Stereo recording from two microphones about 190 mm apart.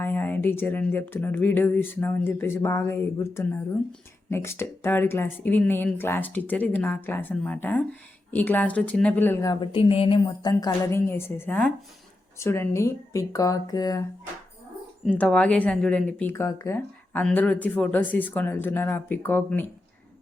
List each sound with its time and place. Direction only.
0.0 s speech: 10° left (ahead or behind)
15.0 s speech: 5° left (ahead or behind)